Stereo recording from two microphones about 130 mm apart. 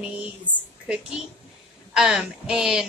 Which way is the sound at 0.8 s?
10° right (ahead or behind).